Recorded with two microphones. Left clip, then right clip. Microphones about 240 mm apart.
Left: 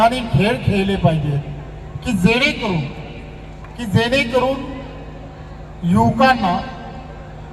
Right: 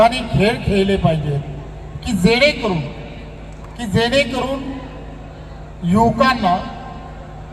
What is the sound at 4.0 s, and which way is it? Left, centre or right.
Speech, right.